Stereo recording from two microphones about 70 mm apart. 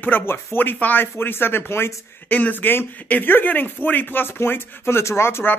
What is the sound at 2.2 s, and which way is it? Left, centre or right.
Speech, left.